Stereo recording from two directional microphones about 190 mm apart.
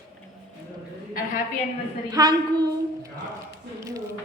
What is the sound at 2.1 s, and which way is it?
Speech, 20° right (ahead or behind).